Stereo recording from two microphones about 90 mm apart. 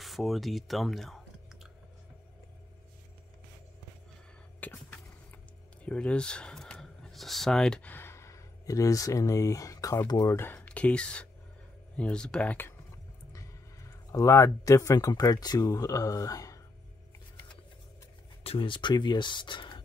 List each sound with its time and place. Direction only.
0.0 s speech: centre (ahead or behind)
4.6 s vehicle: 15° left (ahead or behind)
5.9 s speech: 10° left (ahead or behind)
7.8 s speech: 25° left (ahead or behind); by 10.3 s 45° left (ahead or behind)
10.5 s speech: 15° left (ahead or behind)
13.3 s a sound: 35° left (ahead or behind)
15.4 s speech: 45° left (ahead or behind)
18.4 s speech: 80° left; by 19.8 s 60° left (ahead or behind)